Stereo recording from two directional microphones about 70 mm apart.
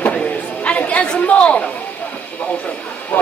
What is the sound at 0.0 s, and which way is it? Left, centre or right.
Chatter, centre.